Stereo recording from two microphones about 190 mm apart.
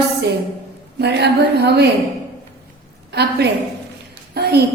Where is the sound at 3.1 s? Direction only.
60° right (ahead or behind).